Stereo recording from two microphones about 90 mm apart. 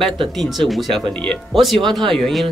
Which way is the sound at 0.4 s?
Centre (ahead or behind).